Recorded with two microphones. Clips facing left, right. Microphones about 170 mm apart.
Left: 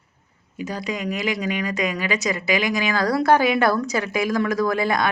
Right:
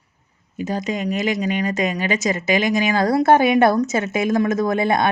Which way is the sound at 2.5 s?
20° right (ahead or behind).